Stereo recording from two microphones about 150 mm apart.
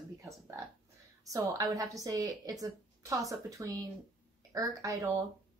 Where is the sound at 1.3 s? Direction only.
20° right (ahead or behind).